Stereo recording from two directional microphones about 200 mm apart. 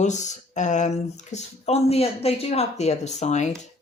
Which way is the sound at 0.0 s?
35° left (ahead or behind).